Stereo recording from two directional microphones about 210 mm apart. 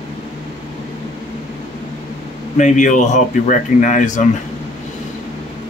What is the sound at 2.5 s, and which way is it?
Speech, 35° left (ahead or behind).